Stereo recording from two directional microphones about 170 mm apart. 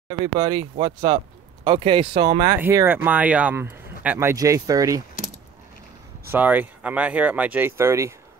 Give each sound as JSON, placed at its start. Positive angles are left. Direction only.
{"t": 0.2, "sound": "speech", "side_deg": -25}
{"t": 2.4, "sound": "speech", "side_deg": -15}
{"t": 6.3, "sound": "speech", "side_deg": -10}